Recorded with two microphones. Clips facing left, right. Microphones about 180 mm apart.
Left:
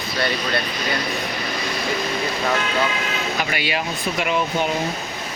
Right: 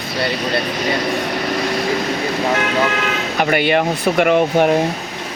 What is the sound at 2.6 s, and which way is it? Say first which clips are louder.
Speech: right 5 dB; 65° right (ahead or behind).